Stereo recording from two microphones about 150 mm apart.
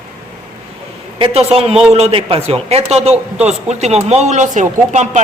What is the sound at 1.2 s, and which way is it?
A man's voice, 40° right (ahead or behind).